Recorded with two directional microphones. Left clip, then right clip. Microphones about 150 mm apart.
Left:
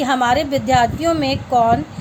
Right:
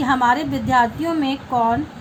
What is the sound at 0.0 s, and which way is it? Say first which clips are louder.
A woman's voice: left 1 dB; 50° left (ahead or behind).